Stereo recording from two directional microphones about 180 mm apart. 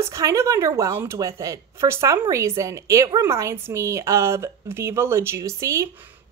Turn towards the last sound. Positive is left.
turn(degrees=-15)  # may be behind; listen again after turning